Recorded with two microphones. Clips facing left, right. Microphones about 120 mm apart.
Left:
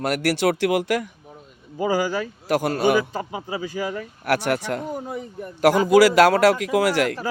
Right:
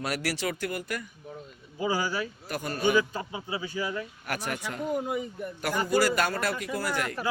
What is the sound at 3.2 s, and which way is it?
Speech, 35° left (ahead or behind).